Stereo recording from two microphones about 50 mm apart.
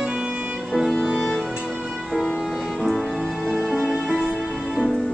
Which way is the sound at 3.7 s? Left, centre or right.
Centre.